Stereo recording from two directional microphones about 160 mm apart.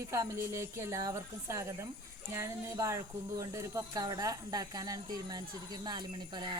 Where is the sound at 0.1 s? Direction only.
20° right (ahead or behind).